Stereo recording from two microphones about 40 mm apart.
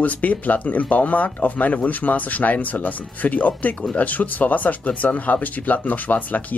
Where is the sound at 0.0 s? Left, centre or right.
Left.